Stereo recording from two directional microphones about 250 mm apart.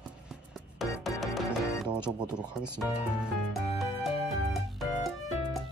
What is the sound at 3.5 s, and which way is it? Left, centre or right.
Music, centre.